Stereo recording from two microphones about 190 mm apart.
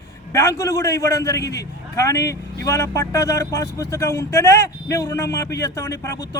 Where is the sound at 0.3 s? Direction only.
15° left (ahead or behind).